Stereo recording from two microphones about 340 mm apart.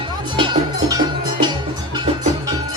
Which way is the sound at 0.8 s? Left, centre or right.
Centre.